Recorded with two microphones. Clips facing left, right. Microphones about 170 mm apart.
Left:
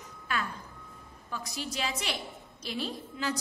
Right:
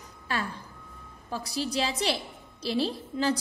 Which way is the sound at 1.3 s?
35° right (ahead or behind).